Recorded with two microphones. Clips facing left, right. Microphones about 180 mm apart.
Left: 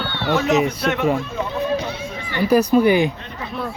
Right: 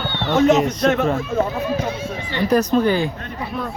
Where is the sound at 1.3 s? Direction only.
45° right (ahead or behind).